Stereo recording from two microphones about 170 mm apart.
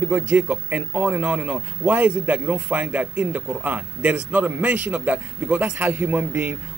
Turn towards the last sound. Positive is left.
turn(degrees=-10)  # may be behind; listen again after turning